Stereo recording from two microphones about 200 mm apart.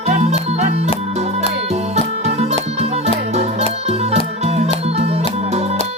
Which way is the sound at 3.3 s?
35° right (ahead or behind).